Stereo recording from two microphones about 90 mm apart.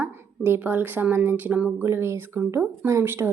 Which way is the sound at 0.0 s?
25° right (ahead or behind).